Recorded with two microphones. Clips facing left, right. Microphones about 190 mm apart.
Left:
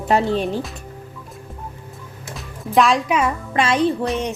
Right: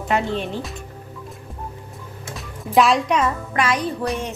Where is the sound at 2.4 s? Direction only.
Centre (ahead or behind).